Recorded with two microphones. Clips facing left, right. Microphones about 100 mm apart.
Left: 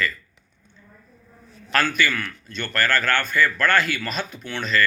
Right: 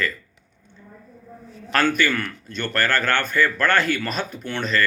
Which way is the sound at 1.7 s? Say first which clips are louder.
Right 2 dB; 50° right (ahead or behind).